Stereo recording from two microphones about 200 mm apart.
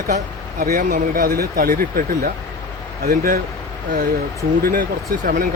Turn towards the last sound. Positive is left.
turn(degrees=-45)  # may be behind; listen again after turning